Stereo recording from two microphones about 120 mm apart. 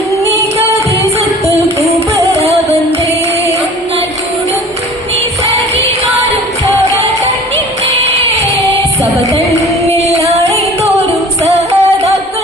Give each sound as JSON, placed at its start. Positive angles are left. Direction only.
{"t": 2.3, "sound": "music", "side_deg": -60}
{"t": 8.0, "sound": "a sound", "side_deg": -60}
{"t": 10.0, "sound": "singing", "side_deg": -60}
{"t": 11.4, "sound": "music", "side_deg": -65}